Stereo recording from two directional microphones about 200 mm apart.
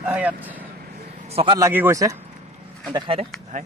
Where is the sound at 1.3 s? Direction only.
30° right (ahead or behind).